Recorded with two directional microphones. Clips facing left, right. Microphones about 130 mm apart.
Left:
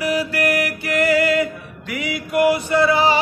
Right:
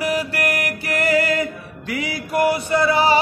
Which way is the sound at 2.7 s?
35° right (ahead or behind).